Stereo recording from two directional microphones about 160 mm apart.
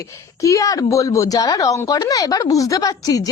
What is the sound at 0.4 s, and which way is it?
Speech, 20° left (ahead or behind).